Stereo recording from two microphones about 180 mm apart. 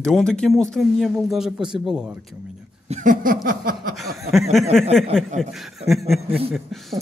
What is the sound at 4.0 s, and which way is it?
Speech, centre (ahead or behind).